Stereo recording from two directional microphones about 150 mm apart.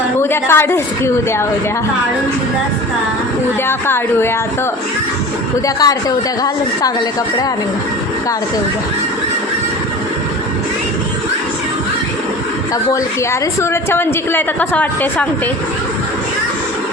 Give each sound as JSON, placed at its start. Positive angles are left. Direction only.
{"t": 0.2, "sound": "a woman's voice", "side_deg": 15}
{"t": 3.7, "sound": "a woman's voice", "side_deg": 15}
{"t": 5.6, "sound": "a woman's voice", "side_deg": 25}
{"t": 13.6, "sound": "a woman's voice", "side_deg": 15}